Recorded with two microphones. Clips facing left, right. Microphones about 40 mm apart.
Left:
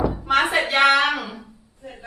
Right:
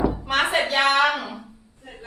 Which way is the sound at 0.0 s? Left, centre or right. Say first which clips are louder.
Even; centre.